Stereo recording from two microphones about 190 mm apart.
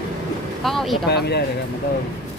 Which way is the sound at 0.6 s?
Centre (ahead or behind).